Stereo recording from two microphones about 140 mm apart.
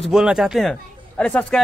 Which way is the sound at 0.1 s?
5° right (ahead or behind).